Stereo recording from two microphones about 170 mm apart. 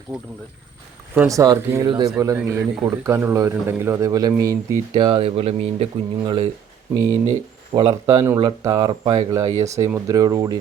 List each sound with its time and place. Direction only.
1.3 s a man's voice: 20° right (ahead or behind)
6.9 s a man's voice: 20° right (ahead or behind)